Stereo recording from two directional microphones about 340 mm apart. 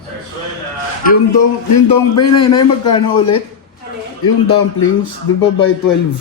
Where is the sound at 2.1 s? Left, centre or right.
Left.